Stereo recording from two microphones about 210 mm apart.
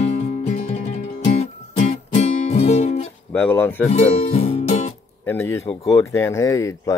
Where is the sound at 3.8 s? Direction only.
30° left (ahead or behind).